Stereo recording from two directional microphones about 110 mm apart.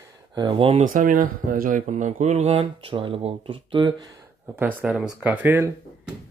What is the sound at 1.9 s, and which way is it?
Speech, 90° right.